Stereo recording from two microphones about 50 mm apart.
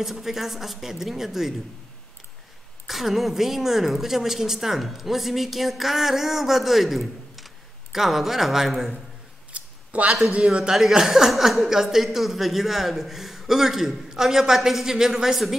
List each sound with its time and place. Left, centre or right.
0.0 s a woman's voice: centre
2.9 s a woman's voice: centre
9.5 s a sound: right
10.3 s a man's voice: right
10.8 s a woman's voice: centre